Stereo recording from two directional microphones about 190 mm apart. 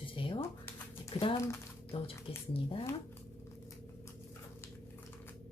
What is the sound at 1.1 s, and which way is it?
Speech, 30° left (ahead or behind).